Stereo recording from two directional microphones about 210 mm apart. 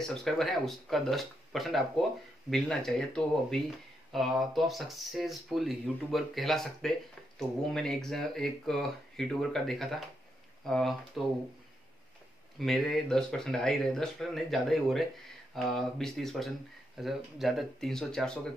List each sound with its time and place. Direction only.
0.0 s speech: centre (ahead or behind)
12.5 s speech: centre (ahead or behind)